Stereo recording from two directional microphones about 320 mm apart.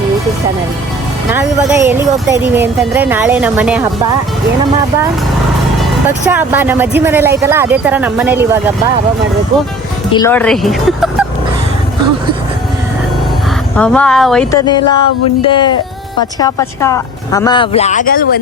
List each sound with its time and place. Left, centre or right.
1.3 s speech: centre
6.1 s speech: centre
10.1 s speech: centre
13.7 s speech: centre
14.7 s speech: centre